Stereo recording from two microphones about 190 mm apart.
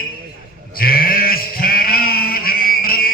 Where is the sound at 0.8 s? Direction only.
50° left (ahead or behind).